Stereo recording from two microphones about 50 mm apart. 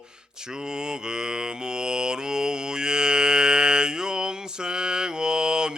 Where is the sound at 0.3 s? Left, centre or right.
Centre.